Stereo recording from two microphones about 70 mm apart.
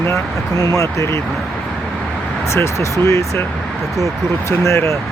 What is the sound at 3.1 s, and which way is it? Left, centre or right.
Speech, left.